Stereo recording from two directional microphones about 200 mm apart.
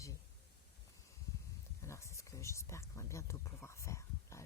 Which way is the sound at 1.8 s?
15° left (ahead or behind).